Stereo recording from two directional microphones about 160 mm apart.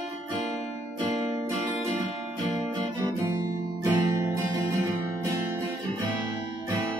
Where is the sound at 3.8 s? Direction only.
20° right (ahead or behind).